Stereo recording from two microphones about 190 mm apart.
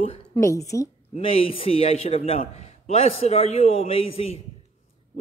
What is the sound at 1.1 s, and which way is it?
Speech, 30° left (ahead or behind).